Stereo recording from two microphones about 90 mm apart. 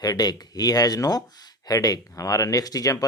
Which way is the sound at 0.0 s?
45° left (ahead or behind).